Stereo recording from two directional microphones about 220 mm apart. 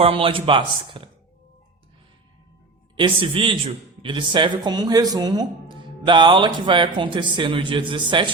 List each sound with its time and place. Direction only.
0.0 s speech: 25° right (ahead or behind)
2.9 s speech: 20° right (ahead or behind)